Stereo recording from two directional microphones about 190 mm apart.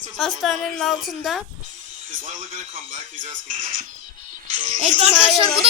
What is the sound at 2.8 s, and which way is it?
Speech, 45° right (ahead or behind).